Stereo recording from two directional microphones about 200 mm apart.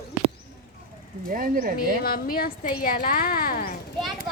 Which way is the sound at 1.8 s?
45° left (ahead or behind).